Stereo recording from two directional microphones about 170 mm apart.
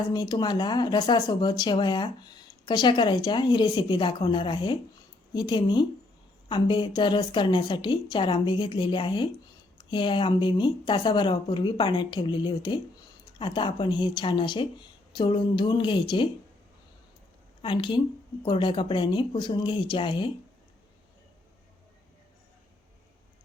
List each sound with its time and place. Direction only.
0.1 s speech: 25° left (ahead or behind)
17.6 s speech: 30° left (ahead or behind)